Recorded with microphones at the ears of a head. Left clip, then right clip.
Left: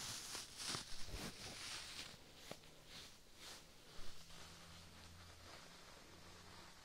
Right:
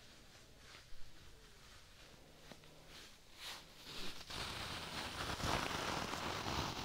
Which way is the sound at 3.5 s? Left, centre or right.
Right.